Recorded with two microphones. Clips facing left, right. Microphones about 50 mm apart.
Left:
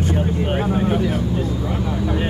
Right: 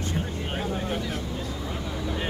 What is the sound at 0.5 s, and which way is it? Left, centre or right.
Vehicle, left.